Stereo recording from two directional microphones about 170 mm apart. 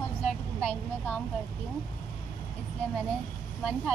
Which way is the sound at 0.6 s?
10° left (ahead or behind).